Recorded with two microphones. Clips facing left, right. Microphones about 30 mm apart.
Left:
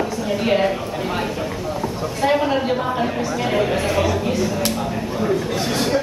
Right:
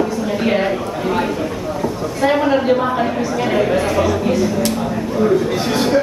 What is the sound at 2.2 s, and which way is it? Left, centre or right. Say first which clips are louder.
Speech: right 4 dB; centre.